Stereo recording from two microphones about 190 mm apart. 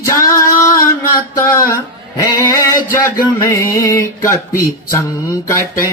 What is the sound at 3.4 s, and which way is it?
Music, 15° left (ahead or behind).